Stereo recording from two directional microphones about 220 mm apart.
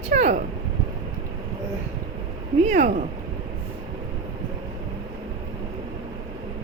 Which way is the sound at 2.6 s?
35° right (ahead or behind).